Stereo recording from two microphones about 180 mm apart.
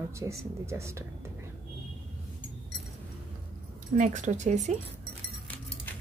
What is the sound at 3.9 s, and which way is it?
Speech, 45° right (ahead or behind).